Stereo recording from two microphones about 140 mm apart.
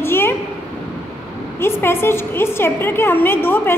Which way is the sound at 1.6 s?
15° left (ahead or behind).